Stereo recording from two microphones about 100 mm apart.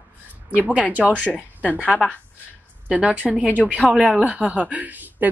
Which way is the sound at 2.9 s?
15° right (ahead or behind).